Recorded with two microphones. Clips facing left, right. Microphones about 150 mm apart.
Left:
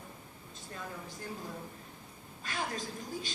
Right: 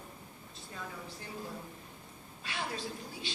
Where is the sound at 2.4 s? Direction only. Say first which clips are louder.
Left 1 dB; 45° left (ahead or behind).